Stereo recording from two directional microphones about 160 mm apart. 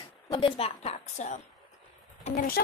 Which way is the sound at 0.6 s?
40° left (ahead or behind).